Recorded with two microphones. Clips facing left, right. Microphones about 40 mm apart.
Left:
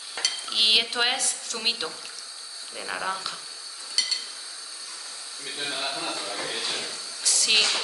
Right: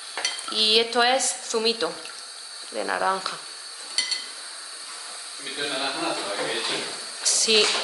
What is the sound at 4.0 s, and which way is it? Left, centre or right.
Stir, right.